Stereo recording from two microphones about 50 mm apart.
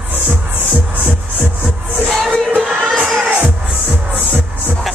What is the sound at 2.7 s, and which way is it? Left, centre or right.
Music, centre.